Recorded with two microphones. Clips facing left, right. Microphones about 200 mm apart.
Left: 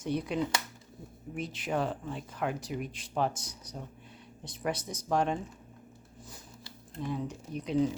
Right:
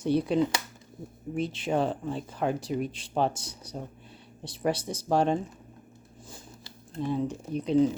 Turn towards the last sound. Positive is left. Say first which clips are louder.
# right 6 dB
turn(degrees=-25)  # may be behind; listen again after turning